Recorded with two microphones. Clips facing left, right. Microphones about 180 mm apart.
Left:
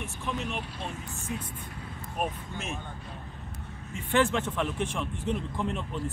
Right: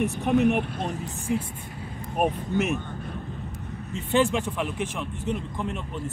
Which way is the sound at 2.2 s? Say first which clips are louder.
Right 8 dB; 50° right (ahead or behind).